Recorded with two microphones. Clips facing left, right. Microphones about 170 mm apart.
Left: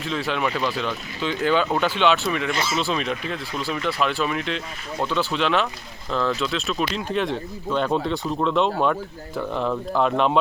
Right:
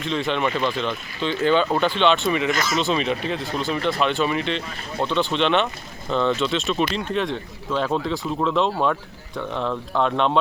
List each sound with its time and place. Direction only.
0.0 s speech: 5° left (ahead or behind)
2.5 s speech: 30° left (ahead or behind)
2.7 s speech: centre (ahead or behind)